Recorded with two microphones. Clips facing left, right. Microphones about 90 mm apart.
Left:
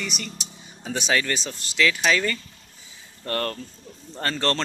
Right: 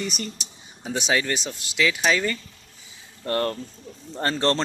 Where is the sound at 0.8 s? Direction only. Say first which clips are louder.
Even; 15° right (ahead or behind).